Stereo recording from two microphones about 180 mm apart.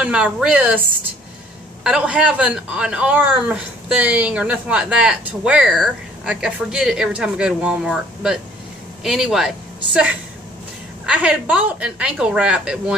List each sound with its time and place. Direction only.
0.0 s a man's voice: 5° right (ahead or behind)
11.1 s a man's voice: 5° right (ahead or behind)